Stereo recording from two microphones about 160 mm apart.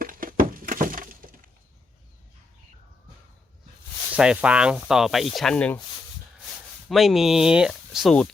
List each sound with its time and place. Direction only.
0.0 s breaking: 60° right (ahead or behind)
4.1 s speech: 5° right (ahead or behind)
6.8 s speech: centre (ahead or behind)